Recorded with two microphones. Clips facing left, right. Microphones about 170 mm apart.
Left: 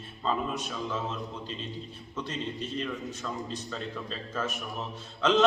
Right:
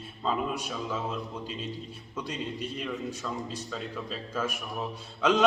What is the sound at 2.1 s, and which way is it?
A man's voice, 10° right (ahead or behind).